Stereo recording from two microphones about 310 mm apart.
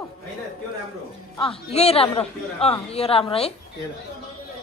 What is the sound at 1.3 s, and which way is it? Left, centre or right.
A woman's voice, centre.